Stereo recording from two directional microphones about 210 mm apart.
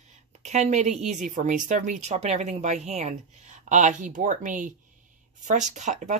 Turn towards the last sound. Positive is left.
turn(degrees=-35)  # may be behind; listen again after turning